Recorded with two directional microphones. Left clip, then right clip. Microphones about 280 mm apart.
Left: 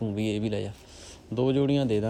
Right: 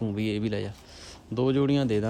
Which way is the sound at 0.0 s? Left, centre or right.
Centre.